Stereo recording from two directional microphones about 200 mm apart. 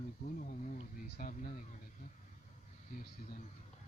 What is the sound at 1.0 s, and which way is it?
Speech, 40° left (ahead or behind).